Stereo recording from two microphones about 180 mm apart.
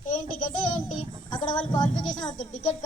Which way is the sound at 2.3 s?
40° left (ahead or behind).